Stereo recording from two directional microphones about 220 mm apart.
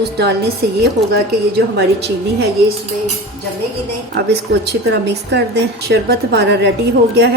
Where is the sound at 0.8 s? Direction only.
45° right (ahead or behind).